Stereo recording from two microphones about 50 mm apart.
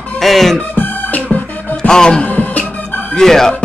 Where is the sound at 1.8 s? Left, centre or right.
Centre.